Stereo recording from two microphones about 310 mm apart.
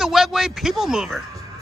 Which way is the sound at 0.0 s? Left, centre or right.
Centre.